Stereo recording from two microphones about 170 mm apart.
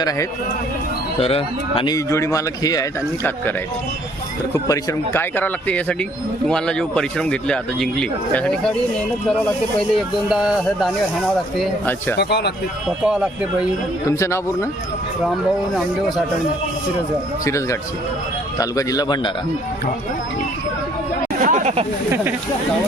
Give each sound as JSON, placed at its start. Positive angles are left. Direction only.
{"t": 1.2, "sound": "speech", "side_deg": 35}
{"t": 2.0, "sound": "speech", "side_deg": 15}
{"t": 4.5, "sound": "a man's voice", "side_deg": 20}
{"t": 9.9, "sound": "a man's voice", "side_deg": -5}
{"t": 12.1, "sound": "speech", "side_deg": 80}
{"t": 13.1, "sound": "a man's voice", "side_deg": -5}
{"t": 14.1, "sound": "speech", "side_deg": 15}
{"t": 15.7, "sound": "a man's voice", "side_deg": 0}
{"t": 17.4, "sound": "a man's voice", "side_deg": 20}
{"t": 21.4, "sound": "a sound", "side_deg": -45}